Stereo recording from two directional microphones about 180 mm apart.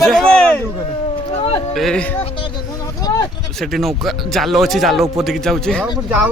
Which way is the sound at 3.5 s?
Centre (ahead or behind).